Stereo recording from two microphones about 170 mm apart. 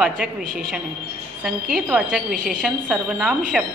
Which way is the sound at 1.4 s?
5° right (ahead or behind).